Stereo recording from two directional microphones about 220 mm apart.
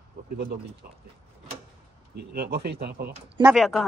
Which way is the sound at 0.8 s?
40° right (ahead or behind).